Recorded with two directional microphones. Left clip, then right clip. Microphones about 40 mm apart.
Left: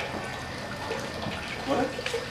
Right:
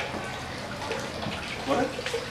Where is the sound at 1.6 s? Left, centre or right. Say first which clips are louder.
Right 1 dB; centre.